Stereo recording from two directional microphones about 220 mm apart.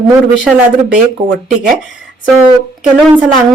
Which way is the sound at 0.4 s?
5° right (ahead or behind).